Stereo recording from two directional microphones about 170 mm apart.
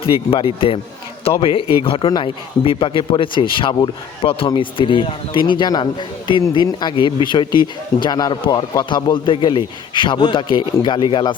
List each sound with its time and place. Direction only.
0.0 s speech: 30° left (ahead or behind)